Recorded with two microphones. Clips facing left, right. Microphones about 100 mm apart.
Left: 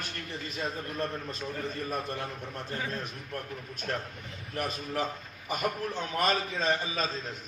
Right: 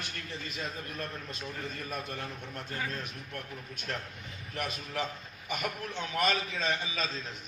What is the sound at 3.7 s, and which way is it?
A man's voice, 40° left (ahead or behind).